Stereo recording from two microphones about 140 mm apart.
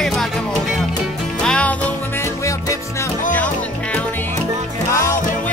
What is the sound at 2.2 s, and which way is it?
Music, 20° left (ahead or behind).